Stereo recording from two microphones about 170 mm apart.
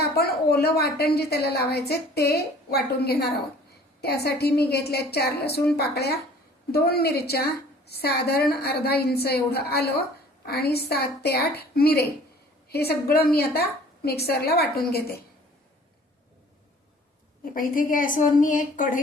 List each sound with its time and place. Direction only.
0.0 s a woman's voice: 70° left (ahead or behind)
17.4 s a woman's voice: 55° left (ahead or behind)